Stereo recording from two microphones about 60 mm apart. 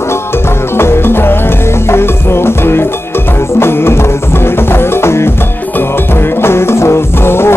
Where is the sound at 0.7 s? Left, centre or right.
Left.